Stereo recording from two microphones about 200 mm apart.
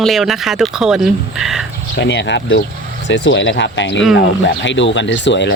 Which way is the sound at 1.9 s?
60° left (ahead or behind).